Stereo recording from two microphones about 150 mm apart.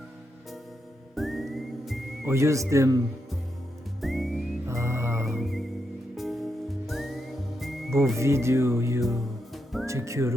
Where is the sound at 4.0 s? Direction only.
Centre (ahead or behind).